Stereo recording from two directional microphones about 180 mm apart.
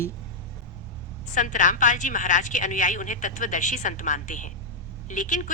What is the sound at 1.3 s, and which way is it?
A woman's voice, 45° left (ahead or behind).